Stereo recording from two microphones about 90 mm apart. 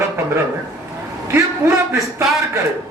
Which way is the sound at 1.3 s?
30° right (ahead or behind).